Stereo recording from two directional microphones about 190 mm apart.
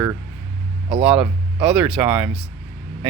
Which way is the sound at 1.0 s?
5° right (ahead or behind).